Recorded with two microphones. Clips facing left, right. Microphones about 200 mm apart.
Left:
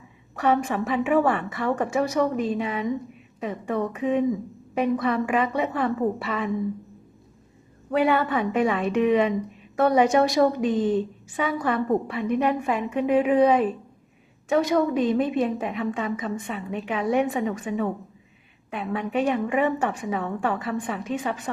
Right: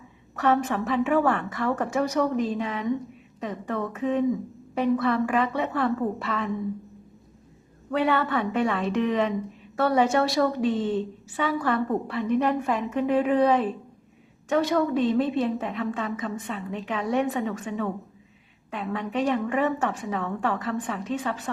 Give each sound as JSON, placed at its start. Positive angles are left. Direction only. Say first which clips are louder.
{"t": 0.3, "sound": "a woman's voice", "louder": "left 1 dB", "side_deg": 10}
{"t": 7.9, "sound": "a woman's voice", "louder": "left 2 dB", "side_deg": 10}